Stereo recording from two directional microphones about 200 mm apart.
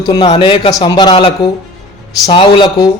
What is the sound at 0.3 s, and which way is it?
A man's voice, 25° left (ahead or behind).